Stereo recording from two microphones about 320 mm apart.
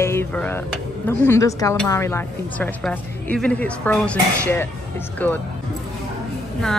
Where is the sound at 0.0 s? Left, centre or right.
Centre.